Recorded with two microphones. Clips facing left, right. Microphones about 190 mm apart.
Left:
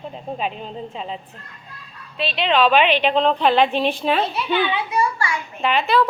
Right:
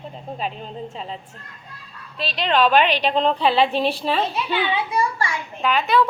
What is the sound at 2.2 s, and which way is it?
Speech, 40° right (ahead or behind).